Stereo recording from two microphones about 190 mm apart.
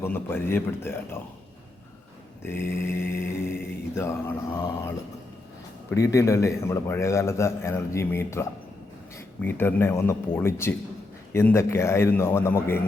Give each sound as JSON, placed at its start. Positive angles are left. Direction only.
{"t": 0.0, "sound": "a man's voice", "side_deg": 10}
{"t": 2.4, "sound": "a man's voice", "side_deg": 10}
{"t": 5.9, "sound": "a man's voice", "side_deg": 15}